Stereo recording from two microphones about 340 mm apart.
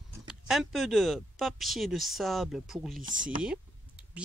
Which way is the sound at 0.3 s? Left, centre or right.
Centre.